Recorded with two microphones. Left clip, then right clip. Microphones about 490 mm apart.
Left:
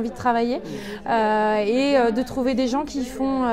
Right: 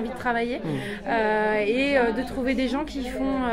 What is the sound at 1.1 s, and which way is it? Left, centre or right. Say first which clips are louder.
Speech: left 3 dB; left.